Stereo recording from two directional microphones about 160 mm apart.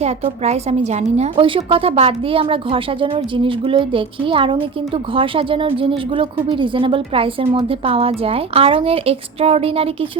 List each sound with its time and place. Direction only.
0.0 s a woman's voice: 40° right (ahead or behind)